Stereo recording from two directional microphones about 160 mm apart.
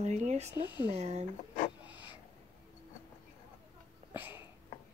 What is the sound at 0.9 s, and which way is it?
Speech, 45° right (ahead or behind).